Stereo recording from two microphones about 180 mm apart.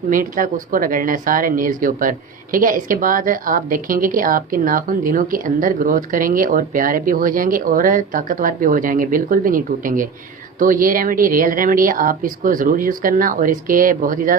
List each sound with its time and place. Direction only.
0.1 s speech: 50° right (ahead or behind)